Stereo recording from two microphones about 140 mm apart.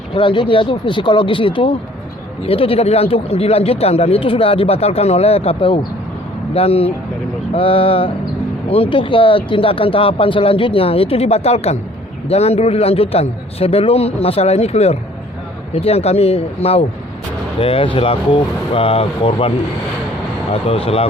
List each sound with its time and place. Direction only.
0.1 s speech: 35° left (ahead or behind)